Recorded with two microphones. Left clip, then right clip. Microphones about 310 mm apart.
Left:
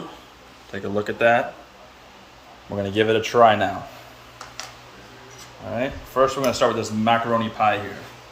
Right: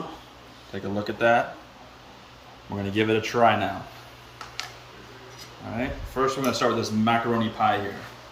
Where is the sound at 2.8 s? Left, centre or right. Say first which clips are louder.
Left 4 dB; centre.